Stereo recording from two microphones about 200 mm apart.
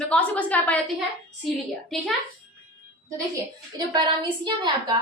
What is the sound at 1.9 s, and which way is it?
Speech, centre (ahead or behind).